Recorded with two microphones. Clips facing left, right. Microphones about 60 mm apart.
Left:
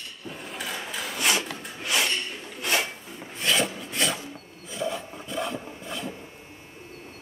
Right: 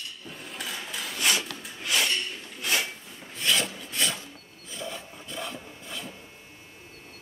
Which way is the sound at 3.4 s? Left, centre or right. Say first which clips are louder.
Left 2 dB; centre.